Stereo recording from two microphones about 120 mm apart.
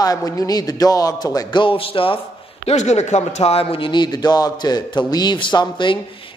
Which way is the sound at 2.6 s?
75° left (ahead or behind).